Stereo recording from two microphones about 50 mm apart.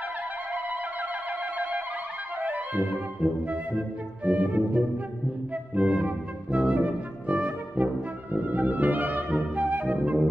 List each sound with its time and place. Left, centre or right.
2.4 s music: right